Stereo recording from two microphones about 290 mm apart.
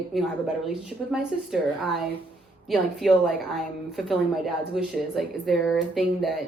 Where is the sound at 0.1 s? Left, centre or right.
Centre.